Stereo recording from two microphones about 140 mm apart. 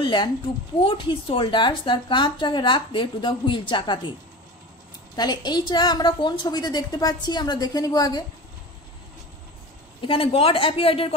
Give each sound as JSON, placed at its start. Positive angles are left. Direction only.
{"t": 0.0, "sound": "a woman's voice", "side_deg": 35}
{"t": 5.1, "sound": "a woman's voice", "side_deg": 30}
{"t": 10.0, "sound": "speech", "side_deg": 40}